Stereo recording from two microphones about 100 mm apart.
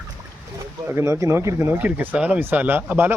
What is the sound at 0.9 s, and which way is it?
Speech, 25° right (ahead or behind).